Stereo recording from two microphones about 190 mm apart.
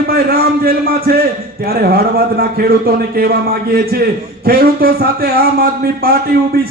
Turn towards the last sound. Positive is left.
turn(degrees=-55)  # may be behind; listen again after turning